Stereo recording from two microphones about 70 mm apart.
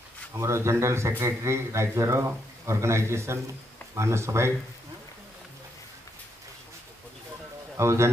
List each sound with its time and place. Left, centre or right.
0.3 s a man's voice: right
7.7 s speech: right